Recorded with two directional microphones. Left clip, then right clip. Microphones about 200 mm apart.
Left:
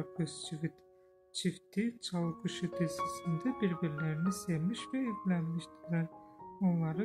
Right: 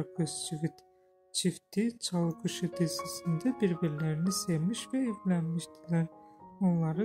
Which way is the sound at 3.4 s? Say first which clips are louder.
Right 6 dB; 25° right (ahead or behind).